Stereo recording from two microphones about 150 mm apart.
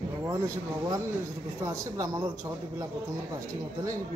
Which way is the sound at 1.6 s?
20° right (ahead or behind).